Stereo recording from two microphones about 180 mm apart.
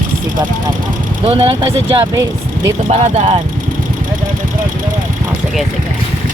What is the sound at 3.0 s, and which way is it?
Speech, 35° right (ahead or behind).